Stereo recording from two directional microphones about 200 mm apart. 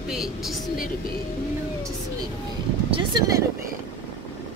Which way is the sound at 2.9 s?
20° right (ahead or behind).